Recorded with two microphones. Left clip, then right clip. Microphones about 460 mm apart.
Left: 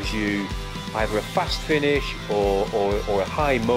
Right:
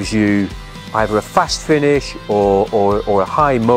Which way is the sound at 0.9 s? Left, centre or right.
Right.